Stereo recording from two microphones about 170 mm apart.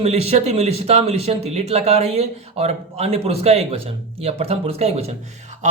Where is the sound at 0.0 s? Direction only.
40° right (ahead or behind).